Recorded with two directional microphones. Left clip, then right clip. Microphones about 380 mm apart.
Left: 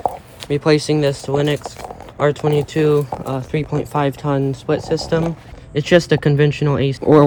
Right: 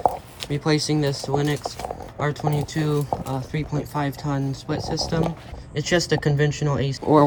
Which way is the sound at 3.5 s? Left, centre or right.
Centre.